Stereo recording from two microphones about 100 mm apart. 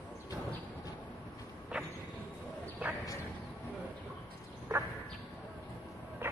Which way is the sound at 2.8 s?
15° right (ahead or behind).